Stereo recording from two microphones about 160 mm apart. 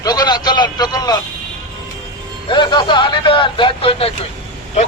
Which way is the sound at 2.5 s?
30° left (ahead or behind).